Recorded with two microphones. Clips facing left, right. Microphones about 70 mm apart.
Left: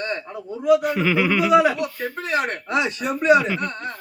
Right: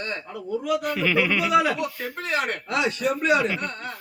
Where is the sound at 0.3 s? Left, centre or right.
Left.